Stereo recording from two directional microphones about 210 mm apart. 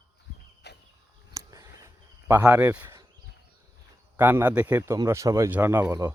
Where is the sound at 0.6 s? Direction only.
55° left (ahead or behind).